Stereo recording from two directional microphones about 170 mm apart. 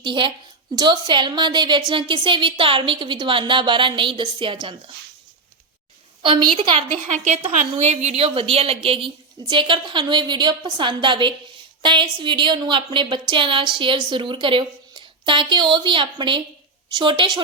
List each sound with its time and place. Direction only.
0.0 s a woman's voice: 30° right (ahead or behind)
6.2 s a woman's voice: 30° right (ahead or behind)